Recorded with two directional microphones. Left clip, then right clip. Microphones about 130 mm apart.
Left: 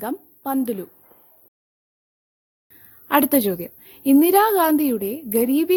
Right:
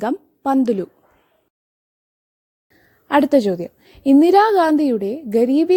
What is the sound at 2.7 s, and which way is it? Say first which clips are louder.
A woman's voice: right 2 dB; 15° right (ahead or behind).